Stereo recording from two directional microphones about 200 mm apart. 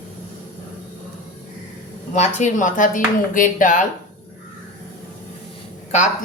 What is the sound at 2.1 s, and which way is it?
Speech, 35° left (ahead or behind).